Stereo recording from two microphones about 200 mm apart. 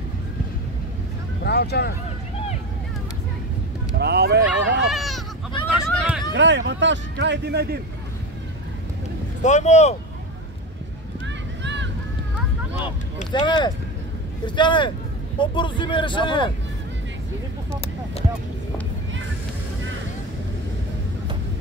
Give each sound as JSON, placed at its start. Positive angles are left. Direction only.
{"t": 1.4, "sound": "speech", "side_deg": 55}
{"t": 4.0, "sound": "speech", "side_deg": -55}
{"t": 4.7, "sound": "a sound", "side_deg": 0}
{"t": 6.3, "sound": "speech", "side_deg": -65}
{"t": 9.4, "sound": "speech", "side_deg": 35}
{"t": 11.2, "sound": "a sound", "side_deg": -65}
{"t": 13.3, "sound": "speech", "side_deg": 20}